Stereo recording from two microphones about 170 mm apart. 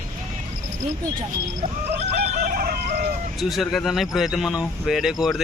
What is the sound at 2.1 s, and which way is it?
Chicken, 65° right (ahead or behind).